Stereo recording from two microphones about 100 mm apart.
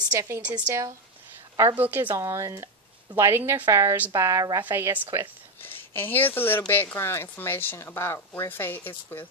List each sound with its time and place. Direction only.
0.1 s speech: 30° right (ahead or behind)
0.4 s a woman's voice: 15° right (ahead or behind)
0.7 s speech: 35° right (ahead or behind)
1.8 s a woman's voice: 20° right (ahead or behind)
2.1 s a woman's voice: 30° right (ahead or behind)
4.6 s a woman's voice: 20° right (ahead or behind)
5.6 s a woman's voice: 20° left (ahead or behind)